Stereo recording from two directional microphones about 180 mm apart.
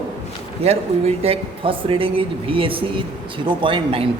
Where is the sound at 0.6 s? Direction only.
35° right (ahead or behind).